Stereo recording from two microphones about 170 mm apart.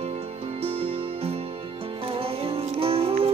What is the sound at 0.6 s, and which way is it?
Music, 35° right (ahead or behind).